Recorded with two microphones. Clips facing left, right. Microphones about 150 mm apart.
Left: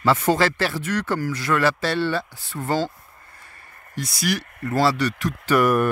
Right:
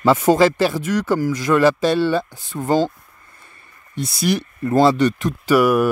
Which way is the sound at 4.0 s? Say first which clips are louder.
Right 5 dB; 25° right (ahead or behind).